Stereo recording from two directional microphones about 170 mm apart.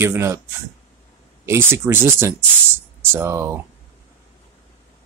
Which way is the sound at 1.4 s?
15° right (ahead or behind).